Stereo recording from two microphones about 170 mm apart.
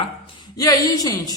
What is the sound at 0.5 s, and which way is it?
Speech, 20° left (ahead or behind).